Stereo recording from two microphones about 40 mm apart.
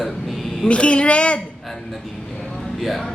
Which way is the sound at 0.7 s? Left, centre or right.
Left.